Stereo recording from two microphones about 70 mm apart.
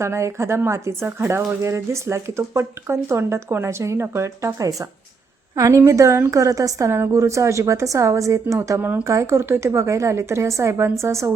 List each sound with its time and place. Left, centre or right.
0.0 s a woman's voice: right
6.3 s a woman's voice: right